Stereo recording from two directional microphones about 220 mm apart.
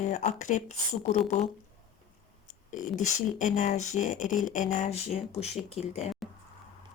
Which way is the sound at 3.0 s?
35° left (ahead or behind).